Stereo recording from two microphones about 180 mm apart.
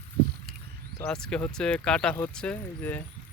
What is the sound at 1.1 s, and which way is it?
Speech, 5° left (ahead or behind).